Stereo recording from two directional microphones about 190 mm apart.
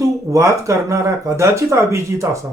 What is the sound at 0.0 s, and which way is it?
Speech, 15° right (ahead or behind).